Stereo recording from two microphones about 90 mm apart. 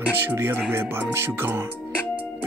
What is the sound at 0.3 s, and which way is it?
Speech, 25° right (ahead or behind).